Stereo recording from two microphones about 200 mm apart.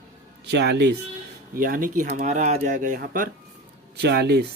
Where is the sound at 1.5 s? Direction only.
45° right (ahead or behind).